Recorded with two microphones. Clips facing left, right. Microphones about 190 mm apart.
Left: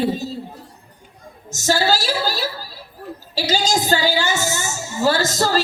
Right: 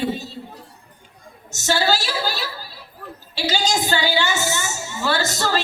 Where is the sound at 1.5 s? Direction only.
40° left (ahead or behind).